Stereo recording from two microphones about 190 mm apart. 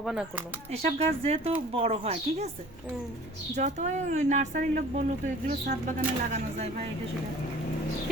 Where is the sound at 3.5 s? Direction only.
40° right (ahead or behind).